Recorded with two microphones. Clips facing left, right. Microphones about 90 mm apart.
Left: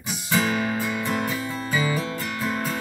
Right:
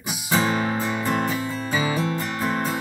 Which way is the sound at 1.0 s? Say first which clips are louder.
Right 2 dB; 35° right (ahead or behind).